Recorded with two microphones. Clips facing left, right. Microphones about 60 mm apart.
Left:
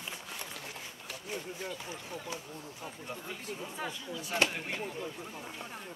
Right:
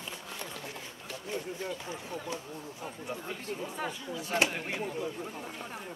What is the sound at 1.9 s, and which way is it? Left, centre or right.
Speech, right.